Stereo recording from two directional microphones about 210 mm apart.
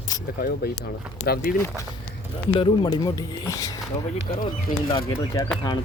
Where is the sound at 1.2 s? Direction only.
45° left (ahead or behind).